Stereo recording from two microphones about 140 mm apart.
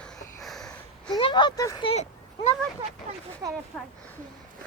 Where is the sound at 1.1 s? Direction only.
35° left (ahead or behind).